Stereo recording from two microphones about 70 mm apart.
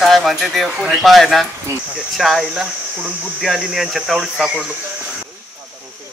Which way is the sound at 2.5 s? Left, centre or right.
Centre.